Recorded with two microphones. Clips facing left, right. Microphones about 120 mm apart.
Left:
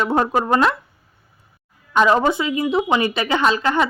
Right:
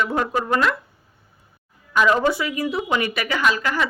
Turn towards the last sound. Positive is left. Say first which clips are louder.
# left 4 dB
turn(degrees=25)  # may be behind; listen again after turning